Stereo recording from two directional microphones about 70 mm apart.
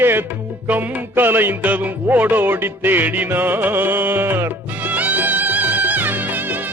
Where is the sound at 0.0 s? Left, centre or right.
Right.